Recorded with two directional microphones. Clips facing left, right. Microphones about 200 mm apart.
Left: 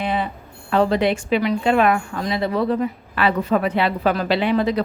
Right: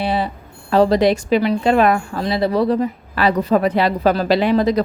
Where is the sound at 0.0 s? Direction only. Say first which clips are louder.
Right 3 dB; 35° right (ahead or behind).